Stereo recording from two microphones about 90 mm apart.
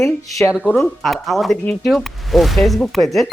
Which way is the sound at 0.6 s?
15° left (ahead or behind).